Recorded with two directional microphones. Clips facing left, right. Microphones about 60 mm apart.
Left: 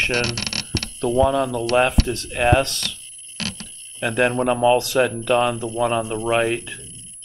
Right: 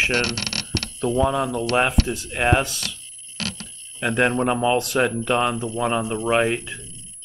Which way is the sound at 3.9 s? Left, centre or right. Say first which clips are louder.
Left 1 dB; centre.